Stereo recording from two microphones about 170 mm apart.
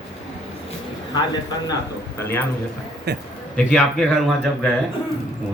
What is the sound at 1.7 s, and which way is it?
Speech, 15° left (ahead or behind).